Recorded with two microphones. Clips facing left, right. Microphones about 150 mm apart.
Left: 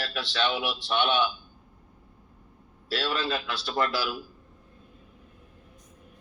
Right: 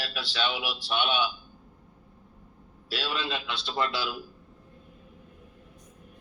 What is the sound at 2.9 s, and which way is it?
A man's voice, 15° right (ahead or behind).